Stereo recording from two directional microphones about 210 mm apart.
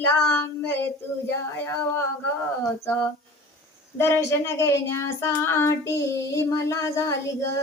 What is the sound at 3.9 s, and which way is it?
Child singing, 10° left (ahead or behind).